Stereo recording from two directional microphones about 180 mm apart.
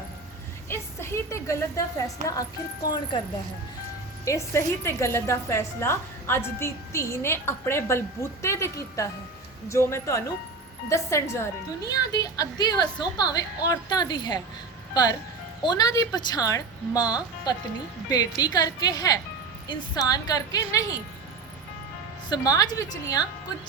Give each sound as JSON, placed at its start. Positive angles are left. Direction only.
{"t": 0.7, "sound": "a woman's voice", "side_deg": 15}
{"t": 4.3, "sound": "a woman's voice", "side_deg": 15}
{"t": 15.6, "sound": "a woman's voice", "side_deg": 20}
{"t": 22.3, "sound": "a woman's voice", "side_deg": 20}